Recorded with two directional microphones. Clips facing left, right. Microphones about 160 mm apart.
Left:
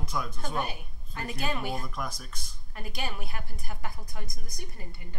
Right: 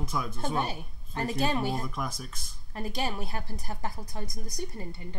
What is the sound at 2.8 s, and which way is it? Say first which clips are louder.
A woman's voice: right 5 dB; 35° right (ahead or behind).